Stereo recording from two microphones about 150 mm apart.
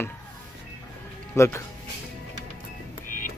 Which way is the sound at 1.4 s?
20° left (ahead or behind).